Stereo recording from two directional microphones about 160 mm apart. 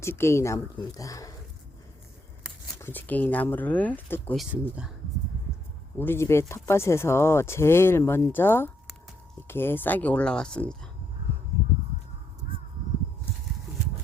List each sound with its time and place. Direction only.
0.0 s speech: 15° left (ahead or behind)
2.8 s speech: 10° left (ahead or behind)
6.0 s speech: 15° left (ahead or behind)